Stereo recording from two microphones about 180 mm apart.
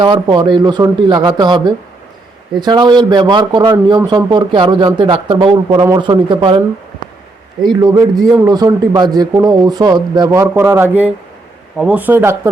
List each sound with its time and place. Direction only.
0.0 s a man's voice: 25° right (ahead or behind)
7.6 s a man's voice: 20° right (ahead or behind)